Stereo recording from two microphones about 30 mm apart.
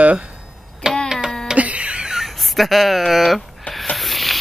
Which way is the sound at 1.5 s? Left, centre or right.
Right.